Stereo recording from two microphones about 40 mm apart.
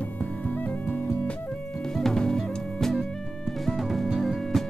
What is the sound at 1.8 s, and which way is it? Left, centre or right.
Music, centre.